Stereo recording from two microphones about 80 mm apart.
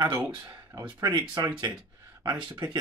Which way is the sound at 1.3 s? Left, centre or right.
Right.